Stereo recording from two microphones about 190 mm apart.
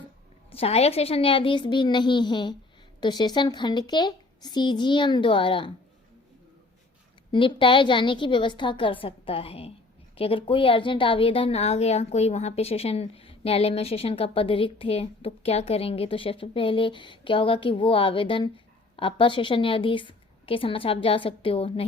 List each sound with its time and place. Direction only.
0.5 s a woman's voice: 30° left (ahead or behind)
7.3 s a woman's voice: 25° left (ahead or behind)